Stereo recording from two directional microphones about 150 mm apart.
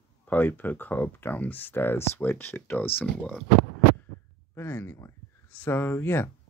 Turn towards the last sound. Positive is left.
turn(degrees=15)  # may be behind; listen again after turning